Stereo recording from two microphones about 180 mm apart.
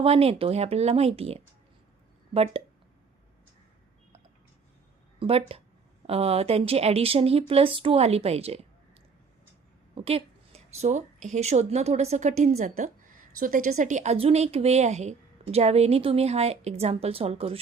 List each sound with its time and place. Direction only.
0.0 s a woman's voice: 35° right (ahead or behind)
5.2 s a woman's voice: 35° right (ahead or behind)
9.9 s a woman's voice: 30° right (ahead or behind)